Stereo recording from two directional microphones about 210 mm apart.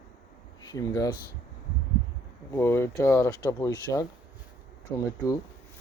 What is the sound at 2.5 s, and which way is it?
Speech, 10° left (ahead or behind).